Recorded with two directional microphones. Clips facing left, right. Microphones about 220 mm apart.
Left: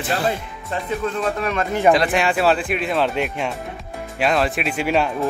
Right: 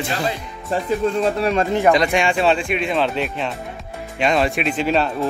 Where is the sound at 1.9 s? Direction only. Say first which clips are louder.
Left 2 dB; centre (ahead or behind).